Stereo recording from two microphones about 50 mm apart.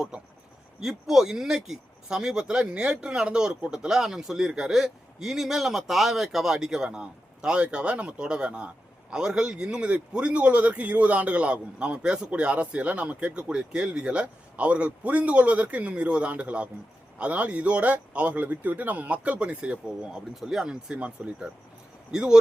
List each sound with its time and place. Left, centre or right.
0.1 s speech: centre
20.3 s speech: centre